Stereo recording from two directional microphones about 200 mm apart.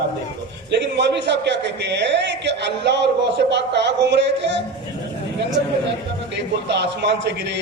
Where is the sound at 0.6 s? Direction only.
60° right (ahead or behind).